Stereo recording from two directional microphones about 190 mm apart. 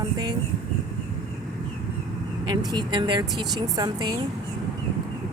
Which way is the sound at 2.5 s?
20° right (ahead or behind).